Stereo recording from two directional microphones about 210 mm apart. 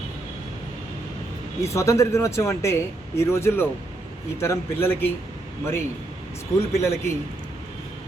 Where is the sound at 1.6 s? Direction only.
15° left (ahead or behind).